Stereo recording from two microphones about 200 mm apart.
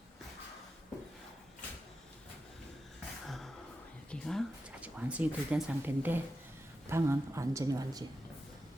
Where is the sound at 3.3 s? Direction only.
Centre (ahead or behind).